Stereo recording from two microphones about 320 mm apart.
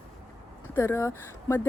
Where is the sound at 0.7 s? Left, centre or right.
Centre.